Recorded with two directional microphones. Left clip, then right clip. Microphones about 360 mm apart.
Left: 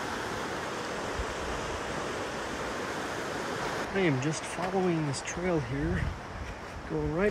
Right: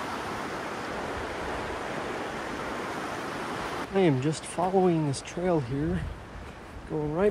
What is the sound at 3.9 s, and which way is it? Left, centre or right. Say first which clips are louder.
Speech: right 5 dB; centre.